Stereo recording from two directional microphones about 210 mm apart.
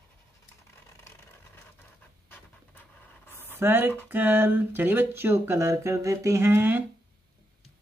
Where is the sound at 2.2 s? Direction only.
10° left (ahead or behind).